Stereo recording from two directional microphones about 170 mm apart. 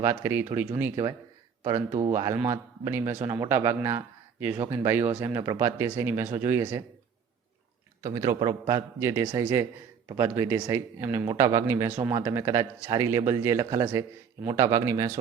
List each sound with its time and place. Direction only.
0.0 s a man's voice: 15° right (ahead or behind)
2.0 s a man's voice: 20° right (ahead or behind)
8.0 s a man's voice: 25° right (ahead or behind)